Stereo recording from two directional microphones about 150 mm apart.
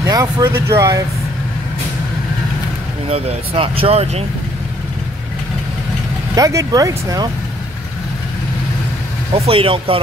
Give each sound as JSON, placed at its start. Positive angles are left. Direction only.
{"t": 0.0, "sound": "speech", "side_deg": -25}
{"t": 3.1, "sound": "speech", "side_deg": -40}
{"t": 6.3, "sound": "speech", "side_deg": -20}
{"t": 9.3, "sound": "speech", "side_deg": -40}